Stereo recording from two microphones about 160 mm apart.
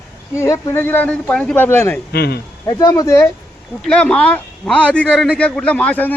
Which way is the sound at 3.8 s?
5° left (ahead or behind).